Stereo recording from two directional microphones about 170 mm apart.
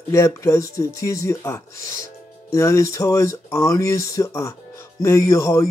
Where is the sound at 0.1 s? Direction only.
15° left (ahead or behind).